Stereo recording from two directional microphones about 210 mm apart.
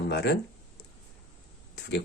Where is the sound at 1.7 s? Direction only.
55° left (ahead or behind).